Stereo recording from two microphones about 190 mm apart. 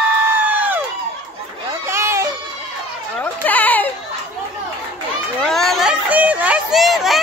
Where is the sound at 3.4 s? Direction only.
10° left (ahead or behind).